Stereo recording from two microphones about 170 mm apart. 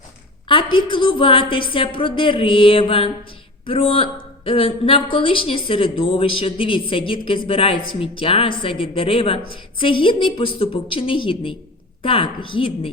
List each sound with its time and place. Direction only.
0.4 s a woman's voice: 30° left (ahead or behind)